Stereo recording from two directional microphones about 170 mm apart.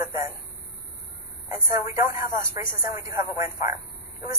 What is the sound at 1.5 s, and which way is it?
Speech, 15° right (ahead or behind).